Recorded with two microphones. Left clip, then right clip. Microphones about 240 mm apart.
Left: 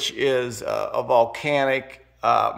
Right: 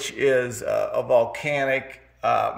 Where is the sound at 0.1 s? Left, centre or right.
Centre.